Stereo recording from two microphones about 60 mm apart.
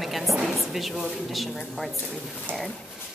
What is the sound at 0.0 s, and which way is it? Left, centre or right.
A woman's voice, centre.